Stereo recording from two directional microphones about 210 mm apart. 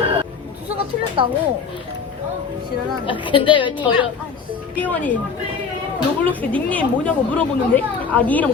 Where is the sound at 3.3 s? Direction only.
25° left (ahead or behind).